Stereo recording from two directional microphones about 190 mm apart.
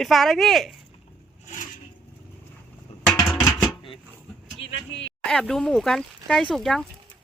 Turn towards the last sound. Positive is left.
turn(degrees=0)  # may be behind; listen again after turning